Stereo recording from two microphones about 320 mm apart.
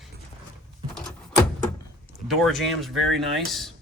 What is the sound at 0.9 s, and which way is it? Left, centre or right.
Door, centre.